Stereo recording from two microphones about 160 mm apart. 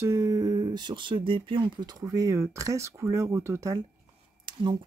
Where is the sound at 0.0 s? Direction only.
20° right (ahead or behind).